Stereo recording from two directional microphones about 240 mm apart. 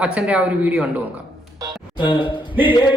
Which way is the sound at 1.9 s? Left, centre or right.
Centre.